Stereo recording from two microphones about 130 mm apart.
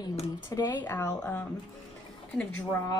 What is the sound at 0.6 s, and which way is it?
Speech, 35° left (ahead or behind).